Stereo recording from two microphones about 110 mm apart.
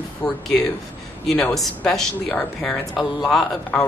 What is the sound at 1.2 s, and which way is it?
Speech, 5° left (ahead or behind).